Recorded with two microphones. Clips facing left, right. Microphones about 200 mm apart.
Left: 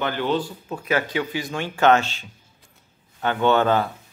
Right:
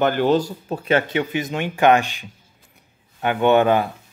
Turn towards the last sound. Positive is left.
turn(degrees=-15)  # may be behind; listen again after turning